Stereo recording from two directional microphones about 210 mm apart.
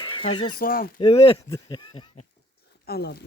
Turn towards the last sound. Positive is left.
turn(degrees=50)  # may be behind; listen again after turning